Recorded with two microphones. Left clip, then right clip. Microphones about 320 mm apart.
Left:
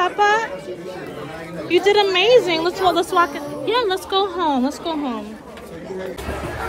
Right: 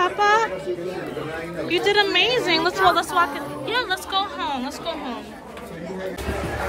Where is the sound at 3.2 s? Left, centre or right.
Centre.